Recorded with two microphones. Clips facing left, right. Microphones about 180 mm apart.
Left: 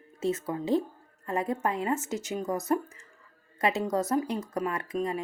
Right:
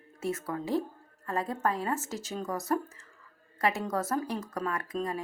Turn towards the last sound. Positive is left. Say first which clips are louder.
# left 2 dB
turn(degrees=20)  # may be behind; listen again after turning